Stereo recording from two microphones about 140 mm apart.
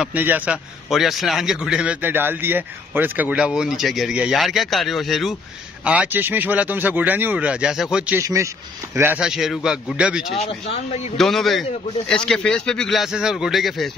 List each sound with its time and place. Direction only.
0.0 s a man's voice: 10° right (ahead or behind)
5.9 s a man's voice: 10° right (ahead or behind)
8.2 s a man's voice: 20° right (ahead or behind)
9.2 s a man's voice: 5° right (ahead or behind)
10.5 s speech: 45° left (ahead or behind)
11.1 s a man's voice: centre (ahead or behind)